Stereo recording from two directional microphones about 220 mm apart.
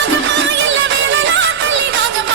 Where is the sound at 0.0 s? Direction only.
55° right (ahead or behind).